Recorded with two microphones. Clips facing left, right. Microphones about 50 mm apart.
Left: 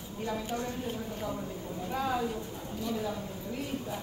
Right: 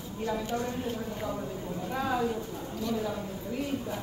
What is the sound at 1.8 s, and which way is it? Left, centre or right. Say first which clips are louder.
Speech: right 2 dB; centre.